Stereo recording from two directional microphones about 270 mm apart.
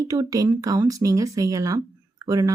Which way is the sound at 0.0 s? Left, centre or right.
Centre.